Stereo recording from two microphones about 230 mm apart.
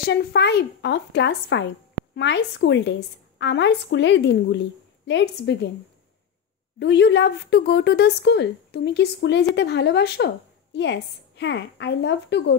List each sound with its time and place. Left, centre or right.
0.0 s a woman's voice: left
6.8 s a woman's voice: left